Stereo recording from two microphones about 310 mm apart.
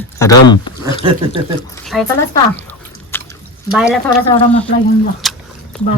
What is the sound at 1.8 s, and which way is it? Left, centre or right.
Zipper, centre.